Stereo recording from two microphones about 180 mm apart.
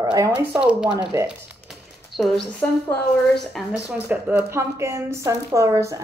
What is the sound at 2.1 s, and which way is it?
Speech, centre (ahead or behind).